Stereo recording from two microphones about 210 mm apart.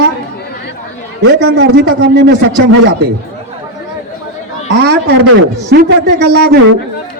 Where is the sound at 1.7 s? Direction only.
50° right (ahead or behind).